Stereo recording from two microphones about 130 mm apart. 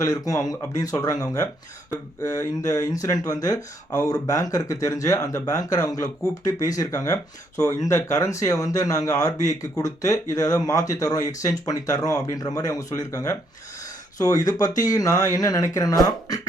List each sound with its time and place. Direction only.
0.0 s speech: 25° left (ahead or behind)